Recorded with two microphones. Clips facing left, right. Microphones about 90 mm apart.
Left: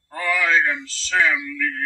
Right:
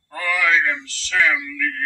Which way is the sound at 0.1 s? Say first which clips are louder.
Even; 25° left (ahead or behind).